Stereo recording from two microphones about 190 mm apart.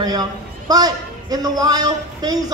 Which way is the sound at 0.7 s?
20° right (ahead or behind).